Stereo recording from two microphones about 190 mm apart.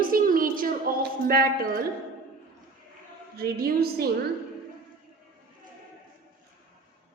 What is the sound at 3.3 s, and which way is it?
Speech, 55° right (ahead or behind).